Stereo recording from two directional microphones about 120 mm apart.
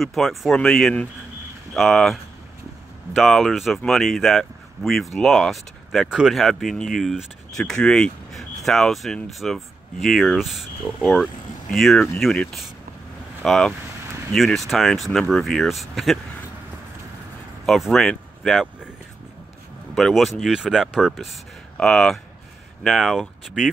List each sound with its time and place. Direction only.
0.0 s speech: centre (ahead or behind)
3.2 s speech: centre (ahead or behind)
17.6 s speech: centre (ahead or behind)
20.0 s speech: centre (ahead or behind)